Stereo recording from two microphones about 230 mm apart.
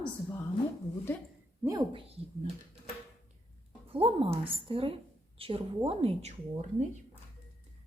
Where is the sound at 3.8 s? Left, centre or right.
Right.